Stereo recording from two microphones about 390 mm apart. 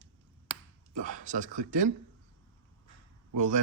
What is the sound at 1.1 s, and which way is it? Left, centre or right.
Speech, centre.